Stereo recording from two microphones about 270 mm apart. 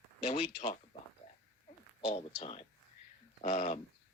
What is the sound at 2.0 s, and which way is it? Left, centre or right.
Speech, left.